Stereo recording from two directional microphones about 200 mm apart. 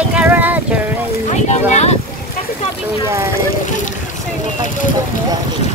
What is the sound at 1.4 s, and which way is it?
Speech, 35° left (ahead or behind).